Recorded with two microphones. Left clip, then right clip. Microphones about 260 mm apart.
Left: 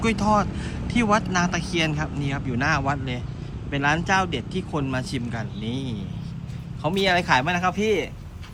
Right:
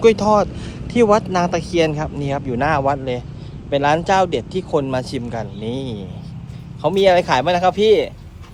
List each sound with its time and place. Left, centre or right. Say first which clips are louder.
0.0 s speech: right 9 dB; centre